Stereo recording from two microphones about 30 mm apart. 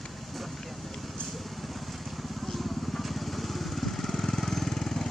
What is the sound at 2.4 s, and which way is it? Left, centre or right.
Vehicle, centre.